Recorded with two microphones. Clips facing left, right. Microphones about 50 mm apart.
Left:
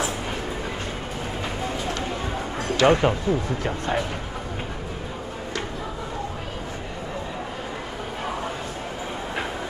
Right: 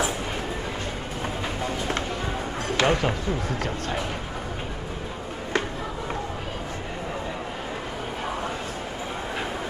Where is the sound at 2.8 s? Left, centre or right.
Centre.